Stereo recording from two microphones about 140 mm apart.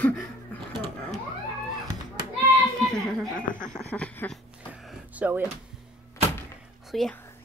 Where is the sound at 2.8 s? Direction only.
Centre (ahead or behind).